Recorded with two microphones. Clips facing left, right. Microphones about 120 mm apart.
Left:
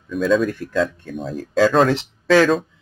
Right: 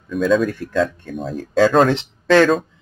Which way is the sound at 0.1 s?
Centre (ahead or behind).